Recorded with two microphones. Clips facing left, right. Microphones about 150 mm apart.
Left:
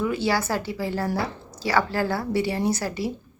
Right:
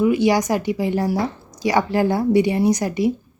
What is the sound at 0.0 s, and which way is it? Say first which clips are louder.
A woman's voice: right 7 dB; 15° right (ahead or behind).